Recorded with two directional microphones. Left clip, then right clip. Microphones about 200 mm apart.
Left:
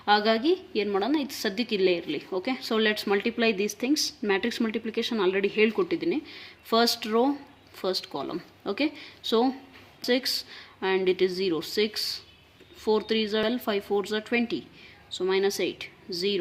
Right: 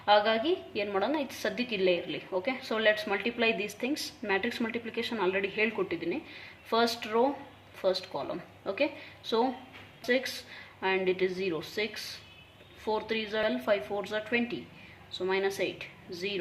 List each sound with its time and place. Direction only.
0.0 s a woman's voice: 45° left (ahead or behind)